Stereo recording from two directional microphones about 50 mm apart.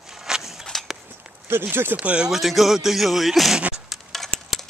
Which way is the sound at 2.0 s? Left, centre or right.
Right.